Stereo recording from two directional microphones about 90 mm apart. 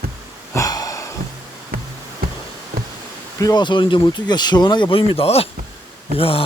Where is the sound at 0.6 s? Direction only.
45° left (ahead or behind).